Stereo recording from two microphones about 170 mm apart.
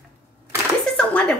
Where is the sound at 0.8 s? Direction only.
5° left (ahead or behind).